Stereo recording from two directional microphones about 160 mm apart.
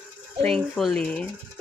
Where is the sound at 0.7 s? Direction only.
5° left (ahead or behind).